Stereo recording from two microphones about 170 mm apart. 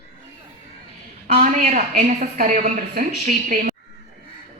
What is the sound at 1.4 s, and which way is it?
A woman's voice, 50° right (ahead or behind).